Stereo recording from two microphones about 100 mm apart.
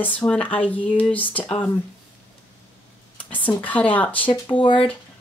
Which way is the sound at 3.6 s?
15° left (ahead or behind).